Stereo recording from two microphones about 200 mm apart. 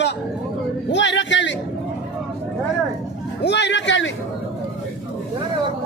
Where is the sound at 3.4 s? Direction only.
60° left (ahead or behind).